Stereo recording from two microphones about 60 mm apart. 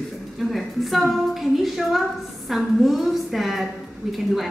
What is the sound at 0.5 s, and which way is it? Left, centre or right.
Speech, centre.